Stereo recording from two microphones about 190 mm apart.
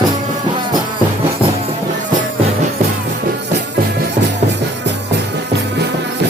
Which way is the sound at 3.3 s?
60° right (ahead or behind).